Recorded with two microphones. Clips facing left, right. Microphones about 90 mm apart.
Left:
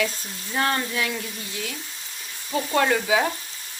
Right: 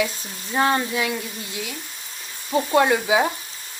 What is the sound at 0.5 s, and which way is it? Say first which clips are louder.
Frying: right 4 dB; 20° right (ahead or behind).